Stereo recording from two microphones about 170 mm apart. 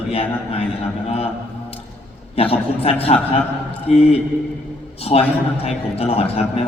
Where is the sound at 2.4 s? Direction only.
35° left (ahead or behind).